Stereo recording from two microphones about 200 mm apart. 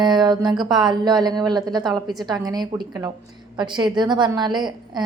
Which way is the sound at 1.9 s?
Centre (ahead or behind).